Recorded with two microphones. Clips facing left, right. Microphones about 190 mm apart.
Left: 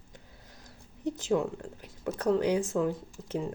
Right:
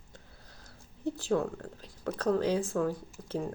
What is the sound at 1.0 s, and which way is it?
Speech, 20° left (ahead or behind).